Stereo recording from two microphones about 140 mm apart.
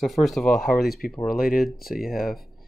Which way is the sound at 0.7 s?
90° left.